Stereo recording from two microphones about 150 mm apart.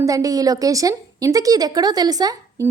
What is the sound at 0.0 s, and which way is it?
A woman's voice, 20° right (ahead or behind).